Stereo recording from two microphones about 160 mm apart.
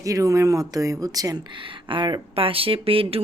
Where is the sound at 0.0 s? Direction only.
20° right (ahead or behind).